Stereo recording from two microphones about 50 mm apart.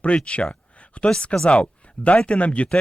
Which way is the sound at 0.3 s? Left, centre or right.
Left.